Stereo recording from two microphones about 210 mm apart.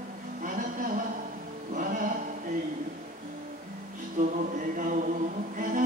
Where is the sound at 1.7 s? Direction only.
40° right (ahead or behind).